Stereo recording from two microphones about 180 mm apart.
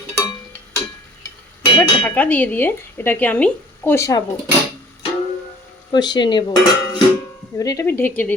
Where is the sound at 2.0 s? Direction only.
10° left (ahead or behind).